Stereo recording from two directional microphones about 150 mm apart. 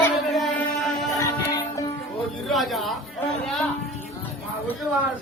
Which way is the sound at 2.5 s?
Centre (ahead or behind).